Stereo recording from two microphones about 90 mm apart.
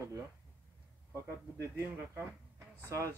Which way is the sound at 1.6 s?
25° right (ahead or behind).